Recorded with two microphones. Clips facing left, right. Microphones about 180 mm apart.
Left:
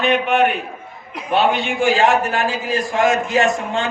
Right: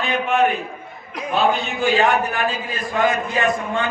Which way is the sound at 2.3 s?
85° left.